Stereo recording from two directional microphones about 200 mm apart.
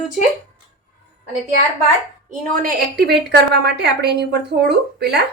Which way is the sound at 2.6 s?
50° right (ahead or behind).